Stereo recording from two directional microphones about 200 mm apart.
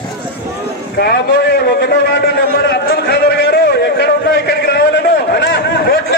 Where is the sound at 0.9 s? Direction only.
50° left (ahead or behind).